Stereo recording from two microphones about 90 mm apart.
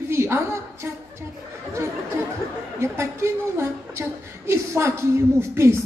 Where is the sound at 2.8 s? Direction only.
30° right (ahead or behind).